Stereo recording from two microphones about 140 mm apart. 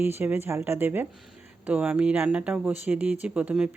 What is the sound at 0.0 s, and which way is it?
Speech, 15° right (ahead or behind).